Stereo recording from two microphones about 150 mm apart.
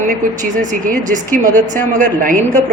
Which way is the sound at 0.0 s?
60° right (ahead or behind).